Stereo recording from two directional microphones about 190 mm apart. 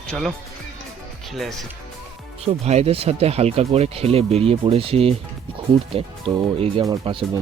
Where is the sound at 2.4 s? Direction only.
35° right (ahead or behind).